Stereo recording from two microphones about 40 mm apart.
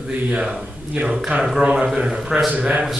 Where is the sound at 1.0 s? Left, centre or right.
Right.